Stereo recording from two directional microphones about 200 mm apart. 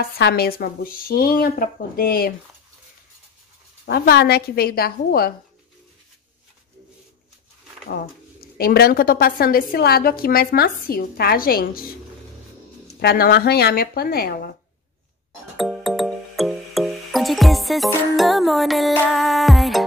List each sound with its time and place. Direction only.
0.2 s a woman's voice: 50° left (ahead or behind)
3.8 s a woman's voice: 50° left (ahead or behind)
7.9 s a woman's voice: 50° left (ahead or behind)
13.0 s a woman's voice: 50° left (ahead or behind)
15.5 s music: centre (ahead or behind)